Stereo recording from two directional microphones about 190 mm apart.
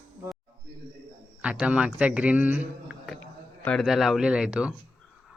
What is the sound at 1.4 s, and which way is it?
A man's voice, 5° right (ahead or behind).